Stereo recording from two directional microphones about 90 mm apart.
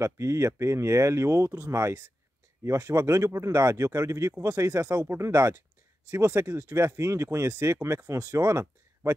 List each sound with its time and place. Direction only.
0.0 s speech: 30° right (ahead or behind)